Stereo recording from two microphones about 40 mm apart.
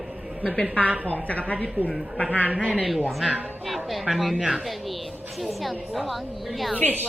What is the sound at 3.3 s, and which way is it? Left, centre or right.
Speech, right.